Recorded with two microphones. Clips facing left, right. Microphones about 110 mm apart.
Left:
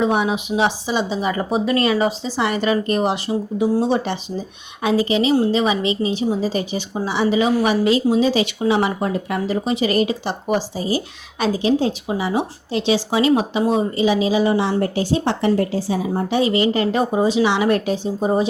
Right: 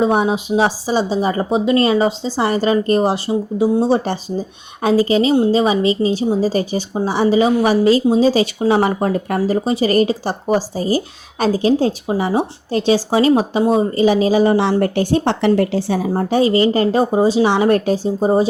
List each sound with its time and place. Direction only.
0.0 s speech: 35° right (ahead or behind)
14.6 s a woman's voice: 65° right (ahead or behind)
16.1 s speech: 40° right (ahead or behind)